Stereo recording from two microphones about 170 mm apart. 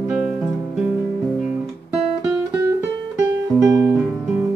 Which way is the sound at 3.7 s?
20° right (ahead or behind).